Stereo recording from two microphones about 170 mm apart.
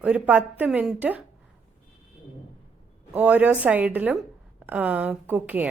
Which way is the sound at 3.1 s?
10° right (ahead or behind).